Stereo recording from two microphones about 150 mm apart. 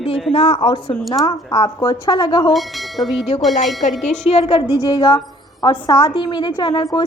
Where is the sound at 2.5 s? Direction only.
Centre (ahead or behind).